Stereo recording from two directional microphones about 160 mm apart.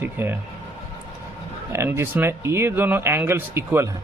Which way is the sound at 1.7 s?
15° right (ahead or behind).